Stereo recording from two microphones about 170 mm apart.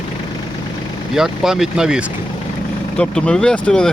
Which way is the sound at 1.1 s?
Centre (ahead or behind).